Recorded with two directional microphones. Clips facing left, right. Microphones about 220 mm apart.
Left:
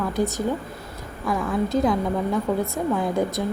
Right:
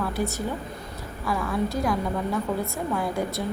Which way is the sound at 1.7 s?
20° left (ahead or behind).